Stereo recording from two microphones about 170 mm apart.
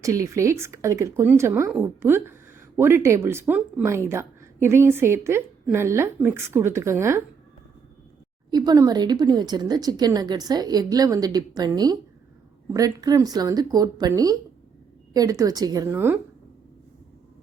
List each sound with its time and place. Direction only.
0.0 s speech: 20° right (ahead or behind)
8.4 s speech: 25° right (ahead or behind)